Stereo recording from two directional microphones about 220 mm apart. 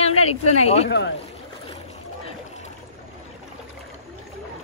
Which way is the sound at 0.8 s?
50° left (ahead or behind).